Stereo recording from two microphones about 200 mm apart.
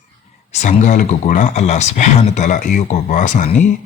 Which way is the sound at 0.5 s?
35° left (ahead or behind).